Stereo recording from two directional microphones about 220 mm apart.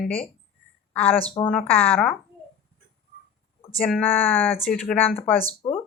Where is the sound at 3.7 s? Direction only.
5° left (ahead or behind).